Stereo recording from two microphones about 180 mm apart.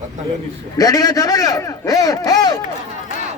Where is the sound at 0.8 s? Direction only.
20° left (ahead or behind).